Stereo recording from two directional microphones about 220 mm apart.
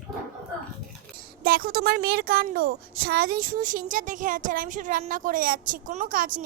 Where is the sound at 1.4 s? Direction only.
40° right (ahead or behind).